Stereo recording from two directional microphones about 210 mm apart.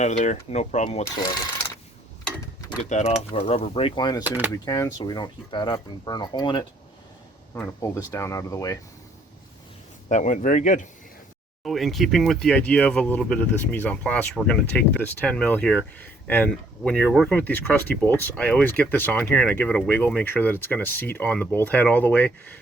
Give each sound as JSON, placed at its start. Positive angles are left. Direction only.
{"t": 0.0, "sound": "speech", "side_deg": 35}
{"t": 2.2, "sound": "a sound", "side_deg": 15}
{"t": 2.9, "sound": "speech", "side_deg": 30}
{"t": 4.3, "sound": "speech", "side_deg": -10}
{"t": 4.6, "sound": "speech", "side_deg": 15}
{"t": 10.1, "sound": "speech", "side_deg": 35}
{"t": 11.6, "sound": "speech", "side_deg": 0}